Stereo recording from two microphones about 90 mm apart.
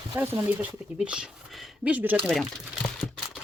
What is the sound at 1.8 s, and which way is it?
Speech, 15° right (ahead or behind).